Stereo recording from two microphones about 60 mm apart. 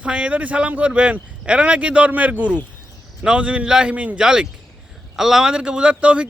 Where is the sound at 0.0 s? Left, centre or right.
Centre.